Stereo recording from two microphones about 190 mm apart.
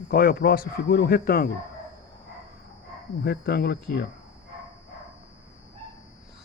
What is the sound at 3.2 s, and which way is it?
Speech, 55° left (ahead or behind).